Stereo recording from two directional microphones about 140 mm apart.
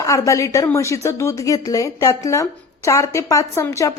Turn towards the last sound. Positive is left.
turn(degrees=20)  # may be behind; listen again after turning